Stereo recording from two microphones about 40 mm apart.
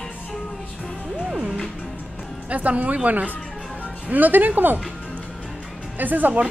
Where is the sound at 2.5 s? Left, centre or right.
Right.